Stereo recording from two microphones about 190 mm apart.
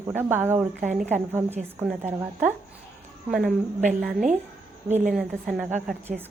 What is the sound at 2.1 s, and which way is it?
A woman's voice, 10° right (ahead or behind).